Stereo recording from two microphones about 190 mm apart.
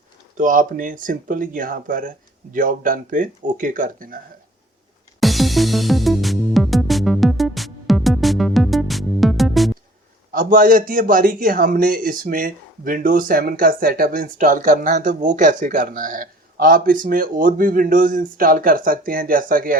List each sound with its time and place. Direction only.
0.3 s a man's voice: 45° right (ahead or behind)
5.2 s music: centre (ahead or behind)
10.3 s a man's voice: 45° right (ahead or behind)